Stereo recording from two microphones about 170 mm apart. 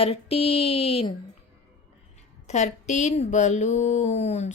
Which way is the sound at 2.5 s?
40° left (ahead or behind).